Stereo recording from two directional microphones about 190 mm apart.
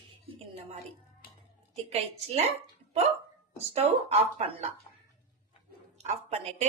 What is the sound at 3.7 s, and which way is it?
Speech, 35° right (ahead or behind).